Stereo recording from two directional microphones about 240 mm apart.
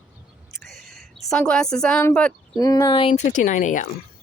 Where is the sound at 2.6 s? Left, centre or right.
Centre; by 3.8 s left.